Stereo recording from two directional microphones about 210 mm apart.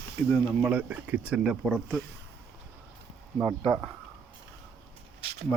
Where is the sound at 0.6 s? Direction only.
5° right (ahead or behind).